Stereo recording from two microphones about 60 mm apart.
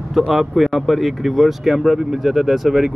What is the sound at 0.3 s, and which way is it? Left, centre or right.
Speech, centre.